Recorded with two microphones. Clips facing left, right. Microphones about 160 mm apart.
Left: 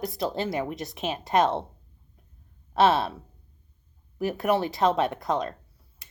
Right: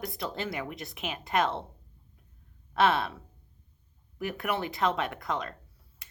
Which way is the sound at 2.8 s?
40° left (ahead or behind).